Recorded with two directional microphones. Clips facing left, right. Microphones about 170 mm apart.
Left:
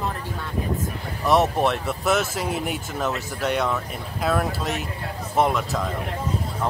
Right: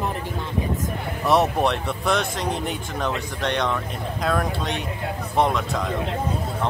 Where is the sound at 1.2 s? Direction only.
Centre (ahead or behind).